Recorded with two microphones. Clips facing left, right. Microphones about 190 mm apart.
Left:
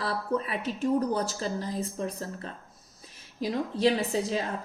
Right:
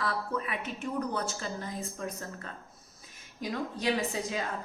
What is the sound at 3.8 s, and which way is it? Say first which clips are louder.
Speech: left 6 dB; 35° left (ahead or behind).